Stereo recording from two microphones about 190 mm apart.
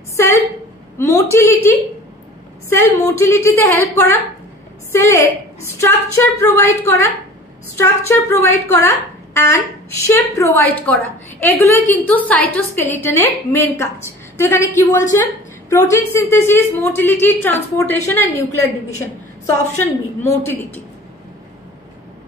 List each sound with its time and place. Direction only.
0.1 s a sound: 15° left (ahead or behind)
0.9 s a woman's voice: 15° left (ahead or behind)
3.2 s a woman's voice: 15° left (ahead or behind)
20.2 s a woman's voice: 10° left (ahead or behind)